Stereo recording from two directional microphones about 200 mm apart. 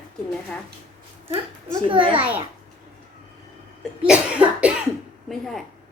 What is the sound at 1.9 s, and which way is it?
Speech, 25° right (ahead or behind).